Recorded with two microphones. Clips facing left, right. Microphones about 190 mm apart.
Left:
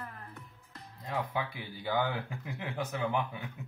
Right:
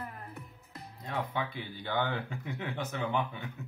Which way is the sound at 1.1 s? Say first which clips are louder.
Even; 5° left (ahead or behind).